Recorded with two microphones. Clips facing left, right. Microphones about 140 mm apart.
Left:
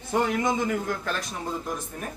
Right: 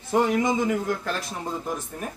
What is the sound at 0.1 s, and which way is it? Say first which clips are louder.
A man's voice: right 3 dB; centre (ahead or behind).